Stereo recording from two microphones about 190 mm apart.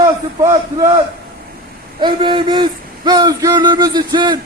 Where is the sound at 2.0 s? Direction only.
25° right (ahead or behind).